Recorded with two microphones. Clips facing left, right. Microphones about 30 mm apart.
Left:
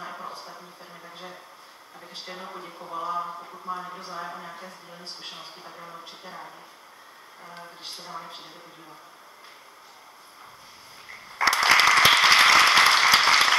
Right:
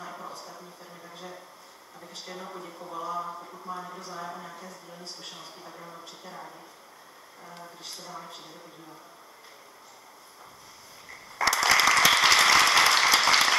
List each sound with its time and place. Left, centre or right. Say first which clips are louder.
0.1 s a sound: left 3 dB; left
1.0 s a sound: left 1 dB; left
2.1 s speech: left 2 dB; left
3.3 s speech: left 2 dB; centre
3.6 s a man's voice: left 4 dB; left
5.8 s speech: left 4 dB; centre
6.0 s speech: left 2 dB; left
7.4 s a man's voice: left 2 dB; left
11.1 s a sound: left 3 dB; left